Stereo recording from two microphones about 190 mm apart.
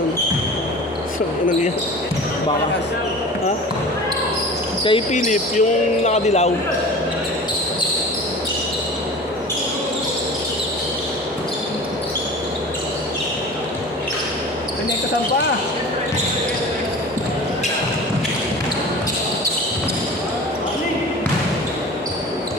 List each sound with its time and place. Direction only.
4.8 s speech: 30° left (ahead or behind)
5.1 s speech: 40° left (ahead or behind)